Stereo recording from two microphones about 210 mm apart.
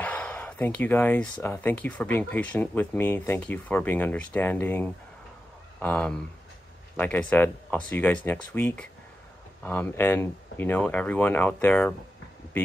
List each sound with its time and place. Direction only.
0.0 s speech: 5° left (ahead or behind)